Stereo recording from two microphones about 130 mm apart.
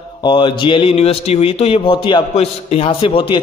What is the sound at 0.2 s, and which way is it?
Speech, 40° left (ahead or behind).